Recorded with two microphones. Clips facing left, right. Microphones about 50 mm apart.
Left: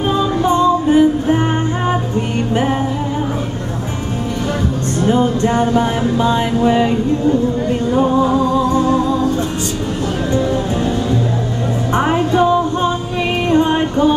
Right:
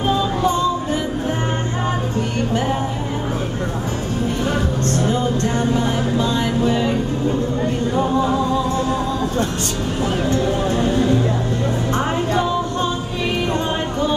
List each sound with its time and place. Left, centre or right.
0.5 s music: left
5.1 s music: left
11.9 s music: left